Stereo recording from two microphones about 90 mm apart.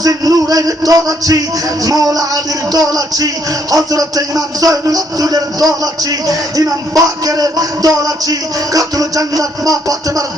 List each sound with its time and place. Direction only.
0.0 s a man's voice: 40° right (ahead or behind)
1.8 s music: 40° right (ahead or behind)
3.7 s speech: 40° right (ahead or behind)